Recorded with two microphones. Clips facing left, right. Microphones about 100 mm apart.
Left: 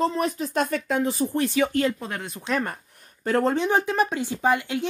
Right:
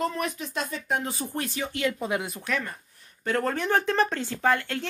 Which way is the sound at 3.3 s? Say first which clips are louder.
Left 5 dB; 35° left (ahead or behind).